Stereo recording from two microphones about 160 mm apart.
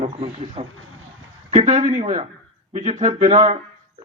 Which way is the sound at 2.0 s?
45° right (ahead or behind).